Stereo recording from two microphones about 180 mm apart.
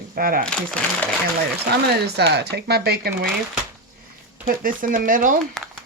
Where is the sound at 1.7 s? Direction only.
65° right (ahead or behind).